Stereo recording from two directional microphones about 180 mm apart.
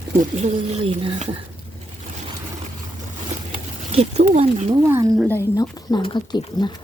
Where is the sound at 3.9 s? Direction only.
35° right (ahead or behind).